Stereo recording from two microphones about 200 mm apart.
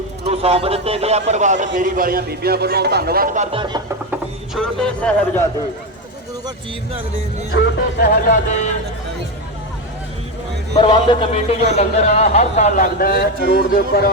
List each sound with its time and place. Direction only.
0.3 s a man's voice: 30° right (ahead or behind)
4.1 s speech: centre (ahead or behind)
7.5 s speech: 50° left (ahead or behind)
10.8 s a man's voice: 25° left (ahead or behind); by 14.1 s 55° left (ahead or behind)